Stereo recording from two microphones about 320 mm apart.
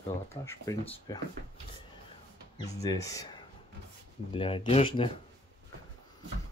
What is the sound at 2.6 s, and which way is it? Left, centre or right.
Speech, centre.